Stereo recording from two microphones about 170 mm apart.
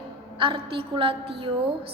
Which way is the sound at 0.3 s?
30° right (ahead or behind).